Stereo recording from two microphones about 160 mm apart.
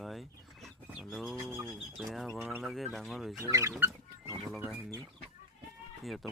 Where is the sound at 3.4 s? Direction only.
20° right (ahead or behind).